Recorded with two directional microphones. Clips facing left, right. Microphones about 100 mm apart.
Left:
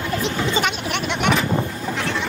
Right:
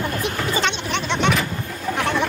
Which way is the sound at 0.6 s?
10° left (ahead or behind).